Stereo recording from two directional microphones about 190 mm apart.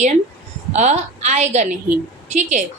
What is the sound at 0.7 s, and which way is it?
A woman's voice, 35° right (ahead or behind).